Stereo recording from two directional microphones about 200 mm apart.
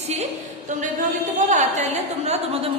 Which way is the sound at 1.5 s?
35° right (ahead or behind).